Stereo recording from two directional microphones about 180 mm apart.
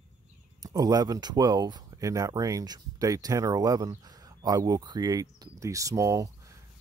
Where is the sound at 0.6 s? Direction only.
20° right (ahead or behind).